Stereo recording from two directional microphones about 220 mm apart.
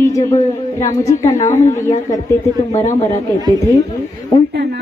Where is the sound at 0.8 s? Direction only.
15° left (ahead or behind).